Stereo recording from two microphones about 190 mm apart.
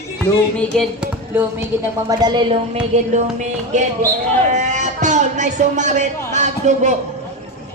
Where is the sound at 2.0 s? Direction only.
20° right (ahead or behind).